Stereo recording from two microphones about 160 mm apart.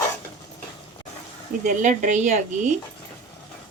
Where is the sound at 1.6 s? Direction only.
55° right (ahead or behind).